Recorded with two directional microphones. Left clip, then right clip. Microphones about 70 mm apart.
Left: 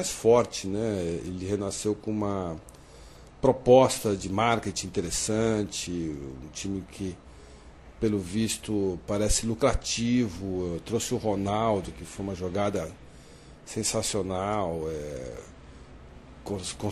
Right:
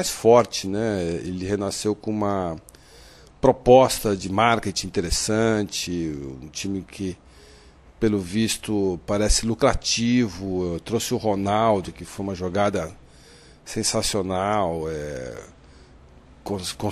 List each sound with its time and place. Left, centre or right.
0.0 s speech: right